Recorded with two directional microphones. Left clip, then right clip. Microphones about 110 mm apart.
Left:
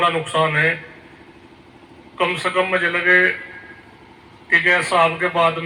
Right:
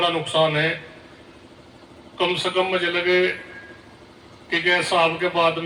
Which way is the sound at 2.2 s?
35° right (ahead or behind).